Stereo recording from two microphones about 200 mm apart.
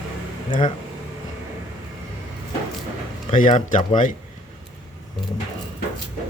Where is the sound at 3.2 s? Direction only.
40° left (ahead or behind).